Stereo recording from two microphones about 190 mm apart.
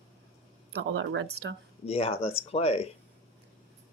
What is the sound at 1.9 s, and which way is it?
Speech, 30° left (ahead or behind).